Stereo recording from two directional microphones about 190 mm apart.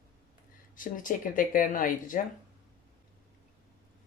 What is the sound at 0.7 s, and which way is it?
Speech, 45° left (ahead or behind).